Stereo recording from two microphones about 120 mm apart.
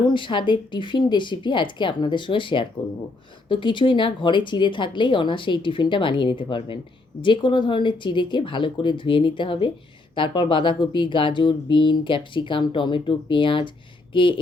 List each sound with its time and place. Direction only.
0.0 s speech: 45° left (ahead or behind)